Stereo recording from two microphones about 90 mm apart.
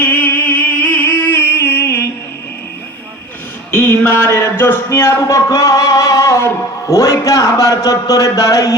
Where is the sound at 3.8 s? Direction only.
25° left (ahead or behind).